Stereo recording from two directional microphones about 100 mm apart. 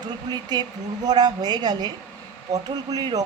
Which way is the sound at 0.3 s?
45° right (ahead or behind).